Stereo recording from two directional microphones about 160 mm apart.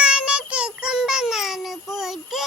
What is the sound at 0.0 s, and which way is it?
Music, 5° right (ahead or behind).